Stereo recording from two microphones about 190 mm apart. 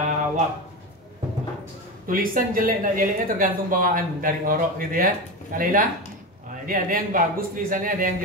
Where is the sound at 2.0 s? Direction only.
45° right (ahead or behind).